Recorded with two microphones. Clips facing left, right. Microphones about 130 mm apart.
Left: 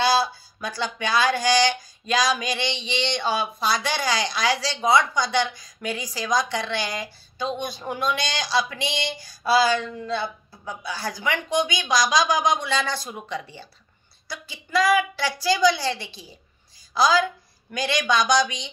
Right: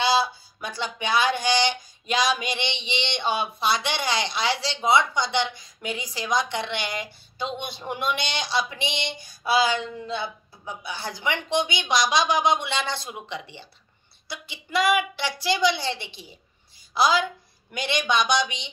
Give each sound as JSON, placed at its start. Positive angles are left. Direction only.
{"t": 0.0, "sound": "a woman's voice", "side_deg": -20}
{"t": 17.1, "sound": "a woman's voice", "side_deg": -20}